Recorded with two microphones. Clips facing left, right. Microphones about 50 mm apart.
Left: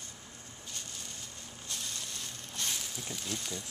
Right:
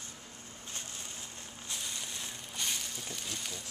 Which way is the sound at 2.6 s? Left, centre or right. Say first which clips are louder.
Even; centre.